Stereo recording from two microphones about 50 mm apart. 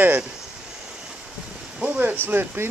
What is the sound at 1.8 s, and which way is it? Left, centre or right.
Speech, right.